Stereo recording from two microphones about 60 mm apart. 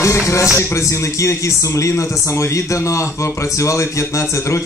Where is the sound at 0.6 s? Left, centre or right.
Left.